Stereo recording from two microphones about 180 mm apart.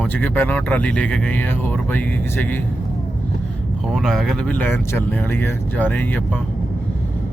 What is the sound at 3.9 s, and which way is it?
Speech, centre (ahead or behind).